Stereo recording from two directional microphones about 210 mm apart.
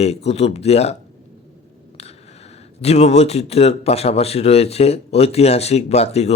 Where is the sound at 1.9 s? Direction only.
30° left (ahead or behind).